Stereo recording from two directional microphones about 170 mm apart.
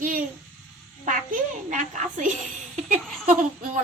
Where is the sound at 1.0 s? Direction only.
50° right (ahead or behind).